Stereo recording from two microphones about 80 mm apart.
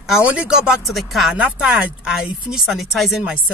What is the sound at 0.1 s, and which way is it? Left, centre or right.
Speech, centre.